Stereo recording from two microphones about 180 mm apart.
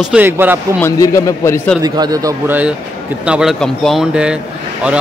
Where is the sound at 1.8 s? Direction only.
20° right (ahead or behind).